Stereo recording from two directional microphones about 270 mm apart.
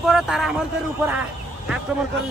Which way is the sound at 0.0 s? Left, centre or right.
Centre.